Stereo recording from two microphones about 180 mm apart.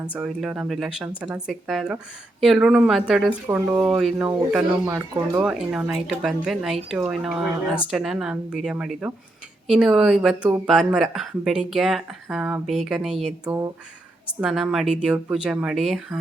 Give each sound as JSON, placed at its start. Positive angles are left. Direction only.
{"t": 0.1, "sound": "speech", "side_deg": -5}
{"t": 4.9, "sound": "speech", "side_deg": -20}
{"t": 5.4, "sound": "speech", "side_deg": -5}